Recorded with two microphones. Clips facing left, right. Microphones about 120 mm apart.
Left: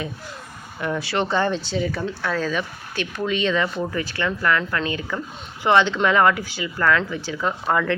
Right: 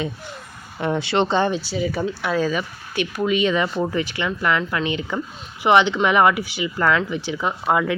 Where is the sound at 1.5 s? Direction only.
10° right (ahead or behind).